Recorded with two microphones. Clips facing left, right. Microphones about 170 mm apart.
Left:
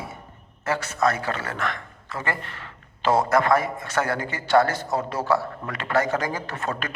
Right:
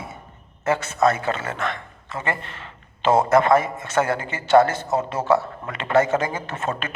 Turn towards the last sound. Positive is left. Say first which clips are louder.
# right 2 dB
turn(degrees=-25)  # may be behind; listen again after turning